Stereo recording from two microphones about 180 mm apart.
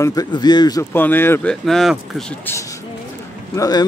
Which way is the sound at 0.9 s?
10° left (ahead or behind).